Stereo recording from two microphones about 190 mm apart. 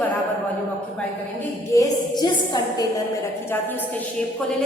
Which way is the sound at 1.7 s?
20° left (ahead or behind).